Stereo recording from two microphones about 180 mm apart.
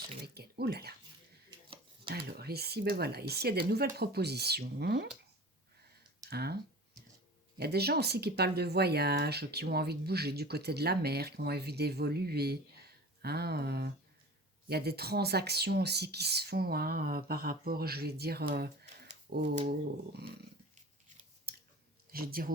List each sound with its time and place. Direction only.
0.3 s a sound: 60° right (ahead or behind)
1.5 s a sound: 25° right (ahead or behind)
2.0 s speech: 60° right (ahead or behind)
6.3 s speech: 60° right (ahead or behind)
7.6 s speech: 60° right (ahead or behind)
21.5 s chewing: 60° right (ahead or behind)
22.1 s speech: 55° right (ahead or behind)